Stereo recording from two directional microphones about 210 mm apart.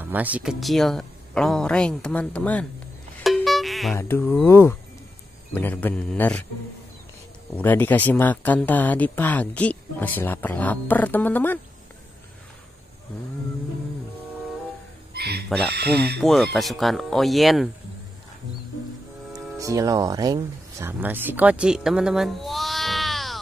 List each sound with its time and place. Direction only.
0.0 s speech: 10° right (ahead or behind)
3.3 s music: centre (ahead or behind)
4.0 s speech: 10° left (ahead or behind)
7.5 s speech: 10° left (ahead or behind)
15.1 s a sound: 50° right (ahead or behind)
15.7 s speech: 50° right (ahead or behind)
16.2 s speech: centre (ahead or behind)
19.6 s speech: 15° right (ahead or behind); by 23.4 s centre (ahead or behind)